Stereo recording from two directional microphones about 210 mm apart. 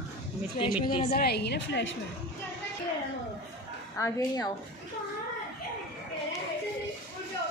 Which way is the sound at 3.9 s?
15° left (ahead or behind).